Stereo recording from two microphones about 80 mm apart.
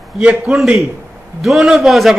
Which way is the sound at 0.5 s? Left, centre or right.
Centre.